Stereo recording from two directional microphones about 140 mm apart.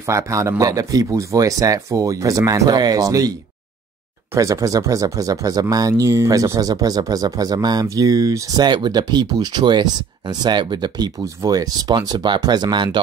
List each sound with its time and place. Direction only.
0.0 s speech: 20° right (ahead or behind)